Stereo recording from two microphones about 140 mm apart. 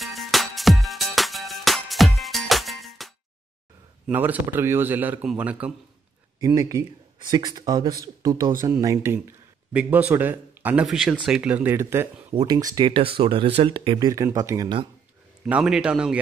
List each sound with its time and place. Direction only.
0.0 s music: centre (ahead or behind)
4.1 s speech: 15° right (ahead or behind)
6.4 s speech: 25° right (ahead or behind)
10.9 s speech: centre (ahead or behind); by 14.7 s 25° right (ahead or behind)
15.4 s speech: 5° right (ahead or behind)